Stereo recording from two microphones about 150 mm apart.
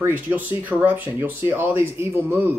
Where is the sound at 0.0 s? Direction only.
15° right (ahead or behind).